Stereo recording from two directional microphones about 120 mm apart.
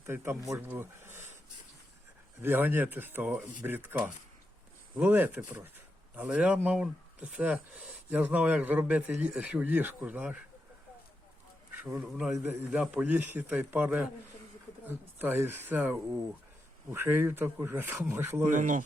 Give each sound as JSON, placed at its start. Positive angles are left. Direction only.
{"t": 0.0, "sound": "speech", "side_deg": -20}
{"t": 2.4, "sound": "speech", "side_deg": -15}
{"t": 11.7, "sound": "a sound", "side_deg": -15}
{"t": 12.0, "sound": "a man's voice", "side_deg": -5}
{"t": 18.5, "sound": "speech", "side_deg": -90}